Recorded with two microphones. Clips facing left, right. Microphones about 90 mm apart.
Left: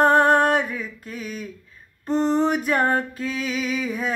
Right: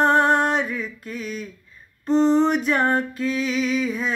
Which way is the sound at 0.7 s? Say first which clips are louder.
Right 2 dB; 40° left (ahead or behind).